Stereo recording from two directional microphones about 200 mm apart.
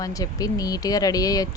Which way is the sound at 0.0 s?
15° left (ahead or behind).